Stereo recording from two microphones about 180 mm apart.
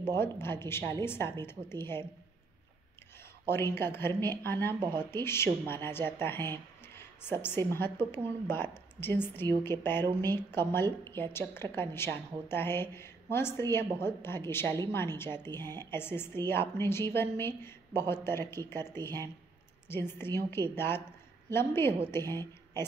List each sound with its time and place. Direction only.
0.1 s a woman's voice: 15° left (ahead or behind)
3.4 s a woman's voice: 10° left (ahead or behind)
4.7 s speech: 20° right (ahead or behind)
5.1 s a woman's voice: 15° left (ahead or behind)
6.5 s a sound: 15° left (ahead or behind)
7.4 s a woman's voice: 10° left (ahead or behind)
10.0 s speech: 20° right (ahead or behind)
10.5 s a woman's voice: 10° left (ahead or behind)